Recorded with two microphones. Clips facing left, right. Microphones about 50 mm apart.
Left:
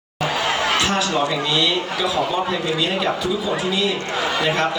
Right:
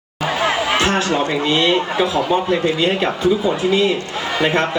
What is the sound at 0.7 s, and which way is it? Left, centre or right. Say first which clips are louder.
A man's voice: right 3 dB; right.